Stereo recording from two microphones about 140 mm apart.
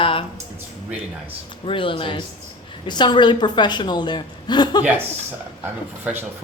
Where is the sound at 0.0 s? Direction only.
40° left (ahead or behind).